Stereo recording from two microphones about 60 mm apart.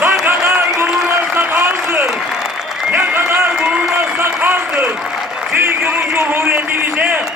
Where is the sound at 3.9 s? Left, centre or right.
Right.